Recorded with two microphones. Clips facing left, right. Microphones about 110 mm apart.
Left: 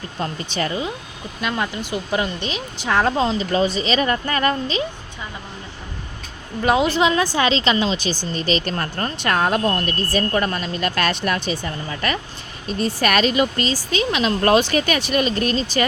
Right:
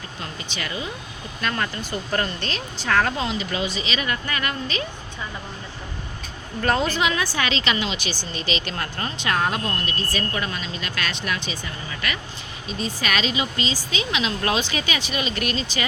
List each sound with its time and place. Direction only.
0.2 s speech: 40° left (ahead or behind)
1.4 s speech: 15° left (ahead or behind); by 4.8 s 35° left (ahead or behind)
6.6 s a woman's voice: 10° left (ahead or behind)
6.8 s speech: 25° left (ahead or behind)
12.6 s speech: 50° left (ahead or behind)
15.4 s speech: 35° left (ahead or behind)